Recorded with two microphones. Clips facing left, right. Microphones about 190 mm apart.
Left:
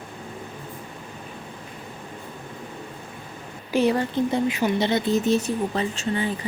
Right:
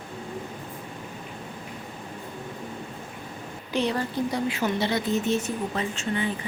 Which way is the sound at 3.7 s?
5° left (ahead or behind).